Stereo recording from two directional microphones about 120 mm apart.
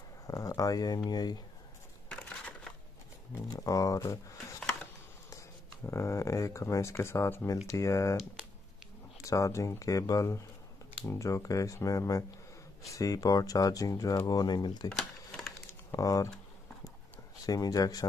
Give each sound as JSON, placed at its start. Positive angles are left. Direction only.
{"t": 0.3, "sound": "speech", "side_deg": 30}
{"t": 2.0, "sound": "crushing", "side_deg": 10}
{"t": 3.4, "sound": "speech", "side_deg": 30}
{"t": 5.9, "sound": "speech", "side_deg": 25}
{"t": 9.2, "sound": "speech", "side_deg": 25}
{"t": 14.9, "sound": "cash register", "side_deg": 5}
{"t": 15.9, "sound": "speech", "side_deg": 30}
{"t": 17.5, "sound": "speech", "side_deg": 30}